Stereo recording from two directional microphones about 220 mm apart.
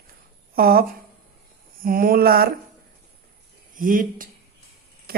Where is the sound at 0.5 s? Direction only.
45° right (ahead or behind).